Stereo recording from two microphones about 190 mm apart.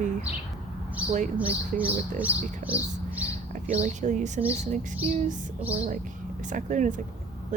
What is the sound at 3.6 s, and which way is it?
A woman's voice, 40° right (ahead or behind).